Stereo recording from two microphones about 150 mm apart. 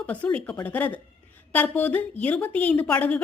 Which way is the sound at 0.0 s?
10° left (ahead or behind).